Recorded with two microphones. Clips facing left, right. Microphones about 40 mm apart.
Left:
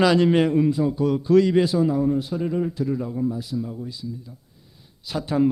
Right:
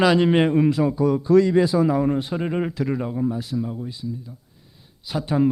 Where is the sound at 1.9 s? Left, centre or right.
Right.